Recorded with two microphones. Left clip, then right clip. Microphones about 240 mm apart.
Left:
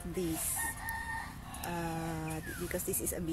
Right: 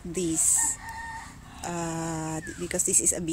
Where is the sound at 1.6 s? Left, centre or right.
Right.